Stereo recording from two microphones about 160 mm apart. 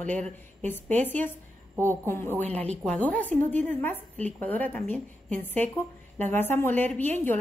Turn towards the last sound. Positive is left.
turn(degrees=10)  # may be behind; listen again after turning